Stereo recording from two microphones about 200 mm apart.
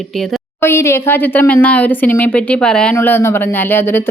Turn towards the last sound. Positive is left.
turn(degrees=10)  # may be behind; listen again after turning